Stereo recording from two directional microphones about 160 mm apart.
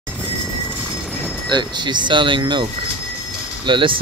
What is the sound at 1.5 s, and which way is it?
Speech, 25° right (ahead or behind).